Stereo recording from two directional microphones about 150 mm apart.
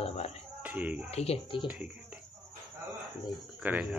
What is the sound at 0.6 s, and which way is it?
Speech, 10° right (ahead or behind).